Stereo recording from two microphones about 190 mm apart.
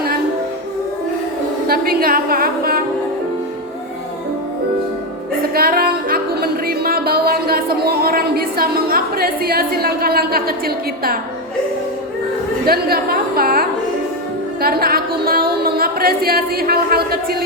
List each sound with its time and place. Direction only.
1.6 s a woman's voice: 50° right (ahead or behind)
5.4 s speech: 50° right (ahead or behind)
12.6 s a sound: 55° right (ahead or behind)